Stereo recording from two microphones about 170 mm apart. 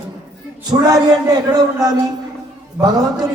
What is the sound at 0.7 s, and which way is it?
A man's voice, 20° right (ahead or behind).